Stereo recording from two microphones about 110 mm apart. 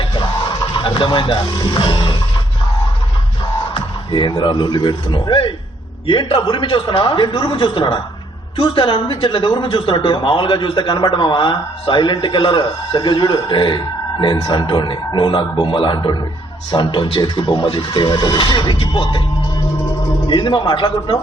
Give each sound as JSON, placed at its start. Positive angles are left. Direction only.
{"t": 0.8, "sound": "speech", "side_deg": 50}
{"t": 3.8, "sound": "speech", "side_deg": 45}
{"t": 20.2, "sound": "speech", "side_deg": 45}